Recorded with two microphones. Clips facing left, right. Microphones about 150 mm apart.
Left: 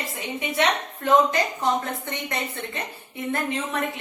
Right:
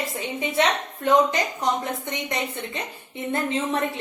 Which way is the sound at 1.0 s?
20° right (ahead or behind).